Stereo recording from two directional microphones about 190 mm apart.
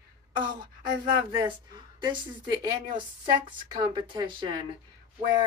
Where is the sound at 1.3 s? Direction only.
25° right (ahead or behind).